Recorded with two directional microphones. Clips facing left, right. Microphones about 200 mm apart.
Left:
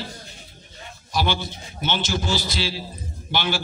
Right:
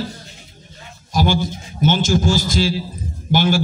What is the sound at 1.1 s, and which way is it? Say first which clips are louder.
A man's voice: right 6 dB; 45° right (ahead or behind).